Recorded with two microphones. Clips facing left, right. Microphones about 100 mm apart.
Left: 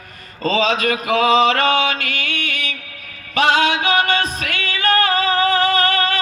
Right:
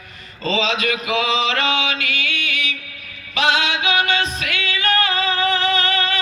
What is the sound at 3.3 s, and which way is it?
Music, 45° left (ahead or behind).